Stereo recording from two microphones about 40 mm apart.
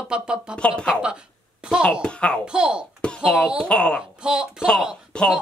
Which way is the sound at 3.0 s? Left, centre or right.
Left.